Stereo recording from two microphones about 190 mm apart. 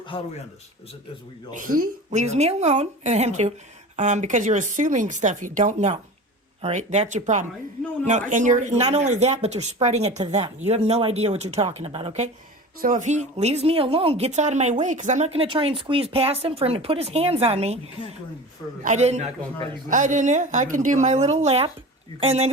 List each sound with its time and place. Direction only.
0.1 s a man's voice: 25° left (ahead or behind)
1.5 s speech: 45° right (ahead or behind)
18.8 s speech: 40° right (ahead or behind)